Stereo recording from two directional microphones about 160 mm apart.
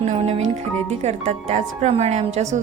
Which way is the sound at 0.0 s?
40° right (ahead or behind).